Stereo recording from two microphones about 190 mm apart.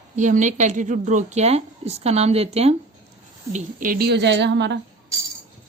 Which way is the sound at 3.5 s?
45° right (ahead or behind).